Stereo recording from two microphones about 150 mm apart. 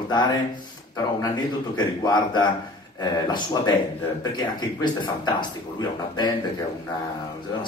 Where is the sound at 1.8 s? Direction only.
30° left (ahead or behind).